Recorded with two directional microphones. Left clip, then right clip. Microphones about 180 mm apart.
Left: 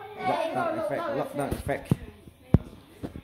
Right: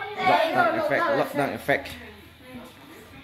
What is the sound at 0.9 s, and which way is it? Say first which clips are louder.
Speech: right 7 dB; 5° left (ahead or behind).